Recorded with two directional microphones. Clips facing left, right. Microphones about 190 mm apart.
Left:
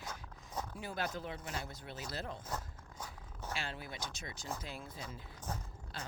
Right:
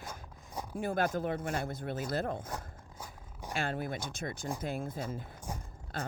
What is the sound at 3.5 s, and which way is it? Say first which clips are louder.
Speech: right 9 dB; 50° right (ahead or behind).